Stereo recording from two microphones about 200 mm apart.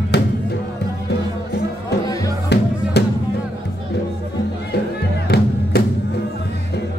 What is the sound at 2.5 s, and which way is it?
Music, 55° left (ahead or behind).